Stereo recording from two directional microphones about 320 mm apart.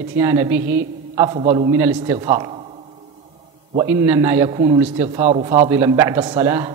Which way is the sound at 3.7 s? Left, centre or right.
Centre.